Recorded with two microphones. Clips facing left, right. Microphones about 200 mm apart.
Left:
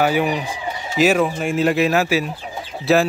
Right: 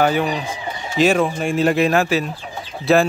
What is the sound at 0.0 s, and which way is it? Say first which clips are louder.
Speech: even; 10° left (ahead or behind).